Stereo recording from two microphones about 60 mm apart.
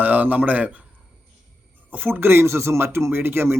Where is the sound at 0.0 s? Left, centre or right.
Right.